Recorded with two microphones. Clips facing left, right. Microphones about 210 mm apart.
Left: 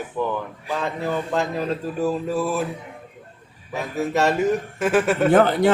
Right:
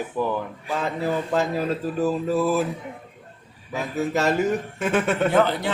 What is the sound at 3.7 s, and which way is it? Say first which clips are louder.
Speech: left 2 dB; centre (ahead or behind).